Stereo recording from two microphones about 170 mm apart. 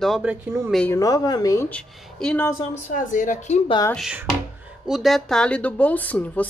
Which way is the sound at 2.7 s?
50° left (ahead or behind).